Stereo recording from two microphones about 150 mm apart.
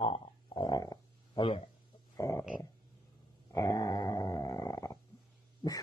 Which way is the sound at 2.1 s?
20° left (ahead or behind).